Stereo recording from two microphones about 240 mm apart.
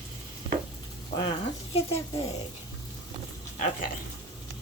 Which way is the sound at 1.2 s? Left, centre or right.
Left.